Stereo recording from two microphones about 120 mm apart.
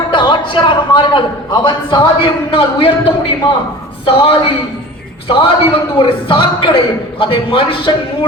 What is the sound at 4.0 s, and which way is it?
A man's voice, 50° left (ahead or behind).